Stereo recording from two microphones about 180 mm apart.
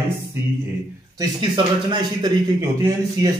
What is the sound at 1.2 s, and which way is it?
Speech, 25° right (ahead or behind).